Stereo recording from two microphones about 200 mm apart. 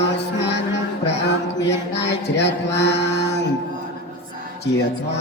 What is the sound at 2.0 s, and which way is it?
Chant, 60° left (ahead or behind).